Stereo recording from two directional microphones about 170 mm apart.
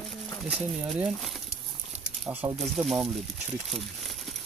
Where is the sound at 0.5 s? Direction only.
5° right (ahead or behind).